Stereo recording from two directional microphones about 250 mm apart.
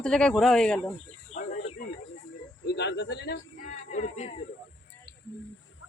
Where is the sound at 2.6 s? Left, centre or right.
Left.